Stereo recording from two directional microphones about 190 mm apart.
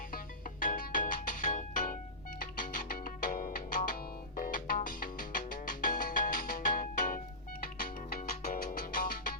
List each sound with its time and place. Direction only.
0.6 s music: 45° left (ahead or behind)